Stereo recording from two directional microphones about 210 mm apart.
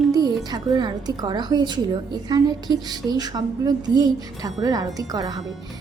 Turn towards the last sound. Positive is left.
turn(degrees=-15)  # may be behind; listen again after turning